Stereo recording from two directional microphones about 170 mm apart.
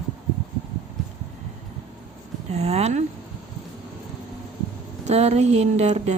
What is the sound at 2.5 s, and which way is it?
Speech, 40° right (ahead or behind).